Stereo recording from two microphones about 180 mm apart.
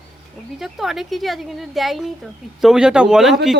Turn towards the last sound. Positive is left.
turn(degrees=0)  # may be behind; listen again after turning